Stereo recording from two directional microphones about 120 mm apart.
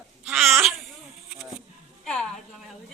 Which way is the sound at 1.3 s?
Centre (ahead or behind).